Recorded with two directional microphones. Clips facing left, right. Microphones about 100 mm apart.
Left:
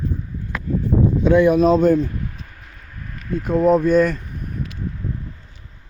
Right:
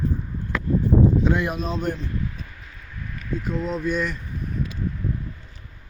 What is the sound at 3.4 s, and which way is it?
Speech, 50° left (ahead or behind).